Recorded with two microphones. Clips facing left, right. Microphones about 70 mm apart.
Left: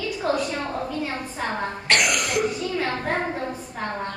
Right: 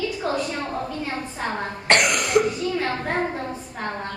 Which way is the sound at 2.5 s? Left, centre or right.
Centre.